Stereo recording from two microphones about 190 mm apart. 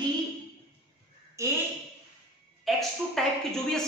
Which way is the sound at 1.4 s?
15° right (ahead or behind).